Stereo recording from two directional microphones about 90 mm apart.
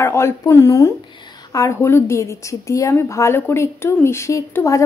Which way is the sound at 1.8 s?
25° left (ahead or behind).